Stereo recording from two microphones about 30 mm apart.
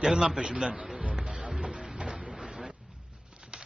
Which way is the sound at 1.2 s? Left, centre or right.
Right.